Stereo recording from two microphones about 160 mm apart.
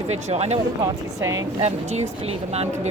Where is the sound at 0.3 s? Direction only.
40° right (ahead or behind).